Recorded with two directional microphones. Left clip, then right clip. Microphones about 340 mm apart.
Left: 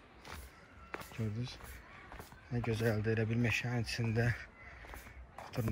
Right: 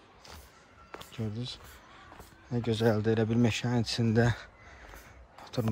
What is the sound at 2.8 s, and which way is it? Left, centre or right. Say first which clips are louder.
Speech: right 9 dB; right.